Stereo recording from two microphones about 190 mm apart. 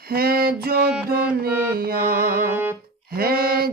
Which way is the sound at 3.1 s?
55° right (ahead or behind).